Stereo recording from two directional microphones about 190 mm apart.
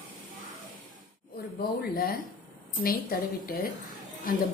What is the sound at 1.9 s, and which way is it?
A woman's voice, 50° left (ahead or behind).